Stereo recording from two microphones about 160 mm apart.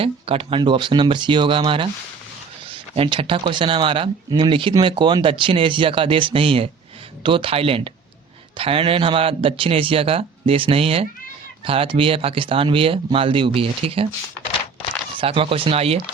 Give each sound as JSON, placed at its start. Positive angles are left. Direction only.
{"t": 0.0, "sound": "speech", "side_deg": -35}
{"t": 2.9, "sound": "speech", "side_deg": -35}
{"t": 15.2, "sound": "speech", "side_deg": -35}